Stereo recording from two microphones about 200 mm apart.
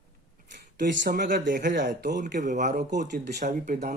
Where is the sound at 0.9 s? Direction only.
60° right (ahead or behind); by 2.7 s 40° right (ahead or behind).